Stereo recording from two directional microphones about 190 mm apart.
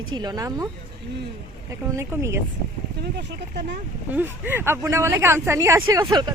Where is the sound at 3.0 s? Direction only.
60° right (ahead or behind).